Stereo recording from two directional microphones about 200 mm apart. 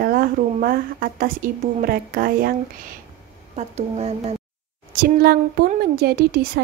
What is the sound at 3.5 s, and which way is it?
Speech, 35° right (ahead or behind).